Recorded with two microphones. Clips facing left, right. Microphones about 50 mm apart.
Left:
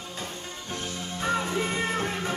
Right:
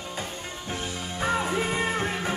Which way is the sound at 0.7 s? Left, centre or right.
Centre.